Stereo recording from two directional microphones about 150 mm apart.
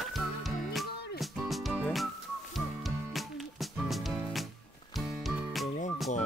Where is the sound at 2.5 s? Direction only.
Centre (ahead or behind).